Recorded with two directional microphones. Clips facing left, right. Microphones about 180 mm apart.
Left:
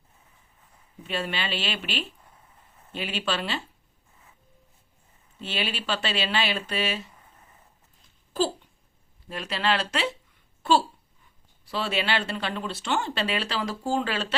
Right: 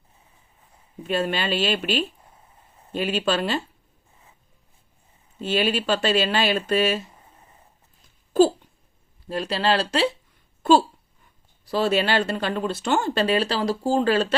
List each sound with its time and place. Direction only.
1.0 s speech: 45° right (ahead or behind)
5.4 s speech: 45° right (ahead or behind)
9.3 s speech: 35° right (ahead or behind)
11.6 s speech: 40° right (ahead or behind)